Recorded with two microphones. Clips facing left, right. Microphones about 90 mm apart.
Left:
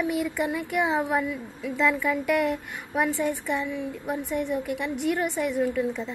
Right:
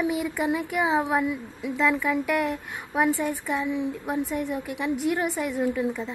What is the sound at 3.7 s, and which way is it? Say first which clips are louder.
Speech: right 3 dB; 20° right (ahead or behind).